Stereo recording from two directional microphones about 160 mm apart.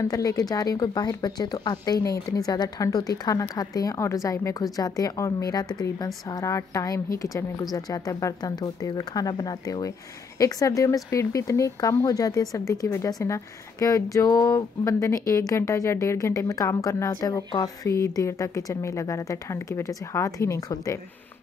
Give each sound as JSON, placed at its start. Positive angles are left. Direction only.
{"t": 0.0, "sound": "speech", "side_deg": 20}